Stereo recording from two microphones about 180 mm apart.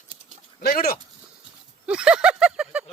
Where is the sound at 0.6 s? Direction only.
60° left (ahead or behind).